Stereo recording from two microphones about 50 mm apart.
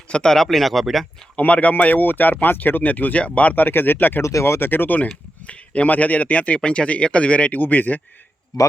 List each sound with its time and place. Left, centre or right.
0.1 s speech: centre
0.4 s speech: centre
1.4 s speech: left
4.2 s speech: left
4.7 s speech: left
5.5 s a man's voice: left